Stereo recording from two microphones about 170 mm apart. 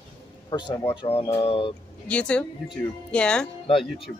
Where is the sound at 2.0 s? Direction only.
5° left (ahead or behind).